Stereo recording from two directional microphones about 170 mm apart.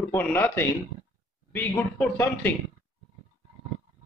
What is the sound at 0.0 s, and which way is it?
Speech, 10° left (ahead or behind).